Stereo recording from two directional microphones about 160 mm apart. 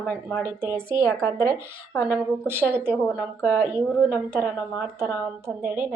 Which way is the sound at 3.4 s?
15° left (ahead or behind).